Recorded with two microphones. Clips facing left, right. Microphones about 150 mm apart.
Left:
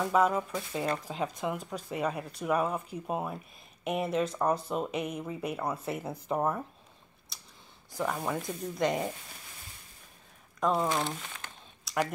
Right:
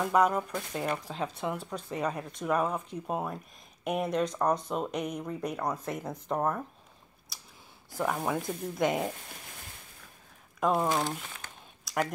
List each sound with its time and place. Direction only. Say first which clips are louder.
0.0 s speech: right 1 dB; centre (ahead or behind)
7.9 s speech: right 2 dB; 5° right (ahead or behind)
10.7 s speech: right 1 dB; 15° right (ahead or behind)
11.8 s a sound: even; centre (ahead or behind)